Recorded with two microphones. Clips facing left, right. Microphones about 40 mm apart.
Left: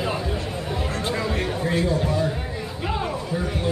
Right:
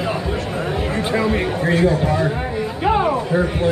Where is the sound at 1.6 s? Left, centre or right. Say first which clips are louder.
Right 6 dB; right.